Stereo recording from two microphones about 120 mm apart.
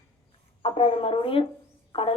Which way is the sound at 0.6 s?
50° left (ahead or behind).